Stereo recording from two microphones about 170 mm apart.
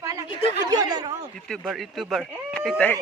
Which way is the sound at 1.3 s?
5° left (ahead or behind).